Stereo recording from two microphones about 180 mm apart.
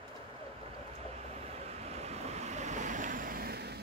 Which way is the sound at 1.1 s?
35° right (ahead or behind).